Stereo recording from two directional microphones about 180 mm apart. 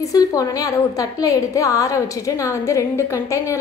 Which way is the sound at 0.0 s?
20° left (ahead or behind).